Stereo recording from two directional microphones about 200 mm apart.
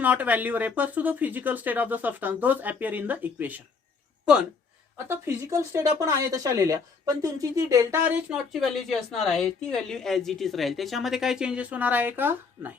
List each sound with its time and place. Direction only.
0.0 s speech: 10° right (ahead or behind)
5.0 s speech: 10° right (ahead or behind)
8.6 s a woman's voice: centre (ahead or behind)